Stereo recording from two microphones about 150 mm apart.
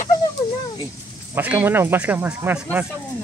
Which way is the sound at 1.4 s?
10° right (ahead or behind).